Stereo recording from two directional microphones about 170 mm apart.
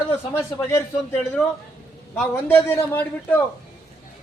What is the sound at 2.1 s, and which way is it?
A man's voice, 10° left (ahead or behind).